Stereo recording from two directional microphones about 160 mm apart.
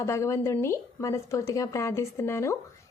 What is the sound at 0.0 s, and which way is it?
Speech, 20° left (ahead or behind).